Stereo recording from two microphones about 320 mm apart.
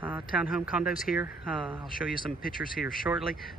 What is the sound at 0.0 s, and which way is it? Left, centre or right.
Speech, centre.